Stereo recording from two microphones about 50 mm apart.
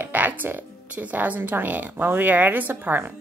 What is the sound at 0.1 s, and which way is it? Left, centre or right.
A woman's voice, right.